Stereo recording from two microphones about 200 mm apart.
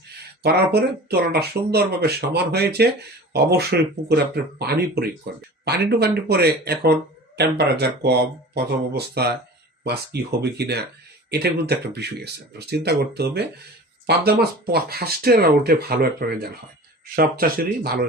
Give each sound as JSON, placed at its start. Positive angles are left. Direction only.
{"t": 0.4, "sound": "speech", "side_deg": -55}